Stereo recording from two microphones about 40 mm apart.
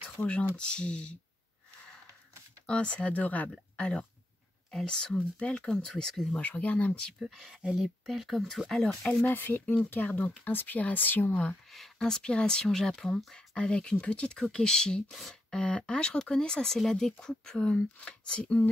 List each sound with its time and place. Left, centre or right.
0.2 s speech: left
2.6 s speech: left
4.8 s speech: left
6.4 s speech: left
7.2 s speech: centre
8.6 s speech: centre
9.2 s speech: left
11.7 s a sound: centre
12.1 s speech: left
12.6 s speech: centre
13.6 s speech: left
15.0 s speech: centre
15.5 s speech: left